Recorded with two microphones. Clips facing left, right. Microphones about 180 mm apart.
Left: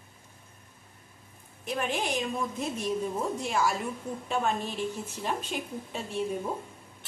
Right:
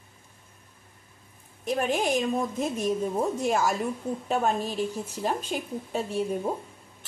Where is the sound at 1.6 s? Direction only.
40° right (ahead or behind).